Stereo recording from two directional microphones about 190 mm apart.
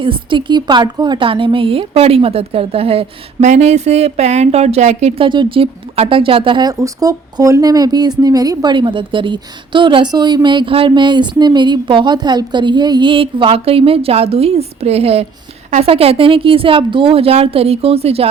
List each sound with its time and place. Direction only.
0.0 s a woman's voice: 25° right (ahead or behind)